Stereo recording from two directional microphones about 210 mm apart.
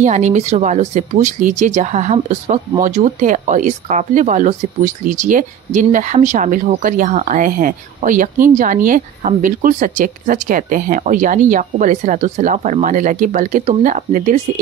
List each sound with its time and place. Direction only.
0.0 s speech: 35° right (ahead or behind)